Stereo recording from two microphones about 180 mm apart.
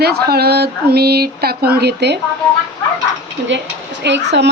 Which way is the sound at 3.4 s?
75° right (ahead or behind).